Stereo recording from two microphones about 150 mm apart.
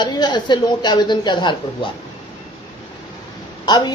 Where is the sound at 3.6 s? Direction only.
30° left (ahead or behind).